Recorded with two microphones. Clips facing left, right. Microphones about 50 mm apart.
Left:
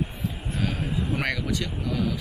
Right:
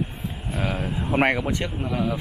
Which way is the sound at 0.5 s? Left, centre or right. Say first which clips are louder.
Right 3 dB; right.